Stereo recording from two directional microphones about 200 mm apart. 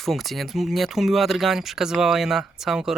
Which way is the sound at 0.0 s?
Centre (ahead or behind).